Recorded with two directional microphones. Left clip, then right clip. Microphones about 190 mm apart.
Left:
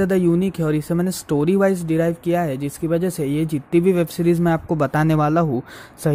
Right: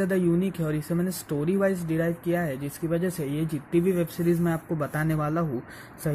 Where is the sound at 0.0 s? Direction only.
45° left (ahead or behind).